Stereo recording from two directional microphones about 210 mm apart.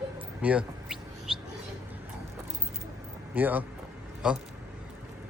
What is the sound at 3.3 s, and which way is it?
A man's voice, 10° right (ahead or behind).